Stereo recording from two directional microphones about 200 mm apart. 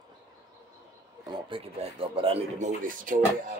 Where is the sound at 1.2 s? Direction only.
25° right (ahead or behind); by 3.2 s 40° right (ahead or behind).